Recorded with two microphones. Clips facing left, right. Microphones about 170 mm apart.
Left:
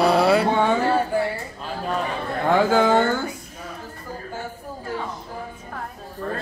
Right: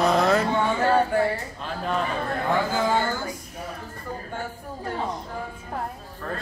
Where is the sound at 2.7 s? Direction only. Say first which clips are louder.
Left 6 dB; 70° left (ahead or behind).